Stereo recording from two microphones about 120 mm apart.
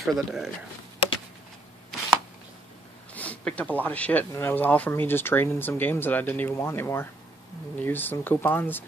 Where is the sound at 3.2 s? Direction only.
10° left (ahead or behind).